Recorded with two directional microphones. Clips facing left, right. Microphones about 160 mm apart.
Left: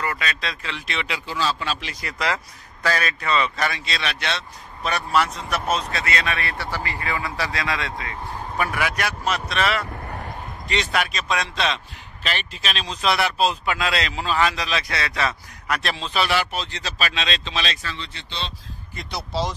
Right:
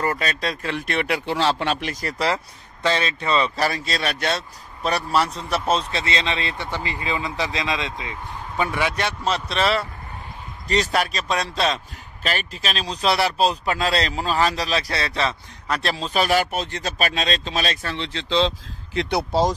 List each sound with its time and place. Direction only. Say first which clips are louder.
0.0 s speech: right 4 dB; 40° right (ahead or behind)
17.9 s speech: right 12 dB; 90° right
18.9 s speech: right 7 dB; 60° right (ahead or behind)